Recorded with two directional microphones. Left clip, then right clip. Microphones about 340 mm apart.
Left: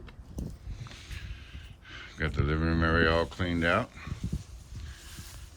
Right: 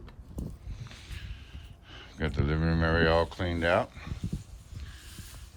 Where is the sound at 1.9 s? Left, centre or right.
Centre.